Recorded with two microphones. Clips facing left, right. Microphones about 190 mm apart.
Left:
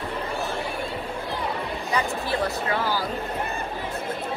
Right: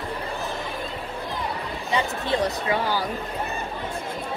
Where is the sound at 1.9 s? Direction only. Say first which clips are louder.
Right 2 dB; 20° right (ahead or behind).